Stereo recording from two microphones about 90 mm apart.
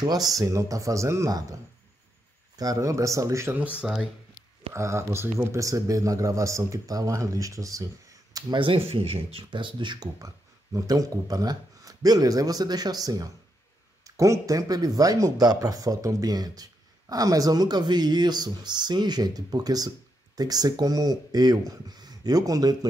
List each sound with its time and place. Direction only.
0.3 s speech: 40° right (ahead or behind)
3.7 s speech: 10° right (ahead or behind)
4.7 s speech: 30° right (ahead or behind)
8.5 s speech: 80° right; by 10.0 s 60° right (ahead or behind)
10.1 s speech: 40° right (ahead or behind)